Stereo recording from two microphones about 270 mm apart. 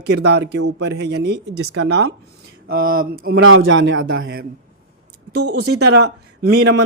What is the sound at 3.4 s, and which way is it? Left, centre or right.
A man's voice, right.